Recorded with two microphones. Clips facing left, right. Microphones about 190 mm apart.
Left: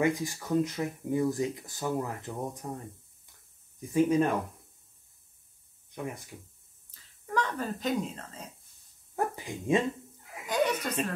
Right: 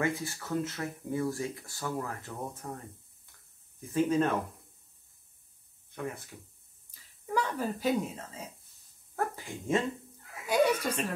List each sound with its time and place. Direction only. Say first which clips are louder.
0.0 s speech: left 4 dB; 15° left (ahead or behind)
3.9 s speech: left 2 dB; 10° left (ahead or behind)
5.9 s speech: even; 15° left (ahead or behind)
6.9 s a sound: right 1 dB; 10° right (ahead or behind)
9.1 s speech: left 2 dB; 15° left (ahead or behind)
10.4 s chuckle: right 2 dB; 10° right (ahead or behind)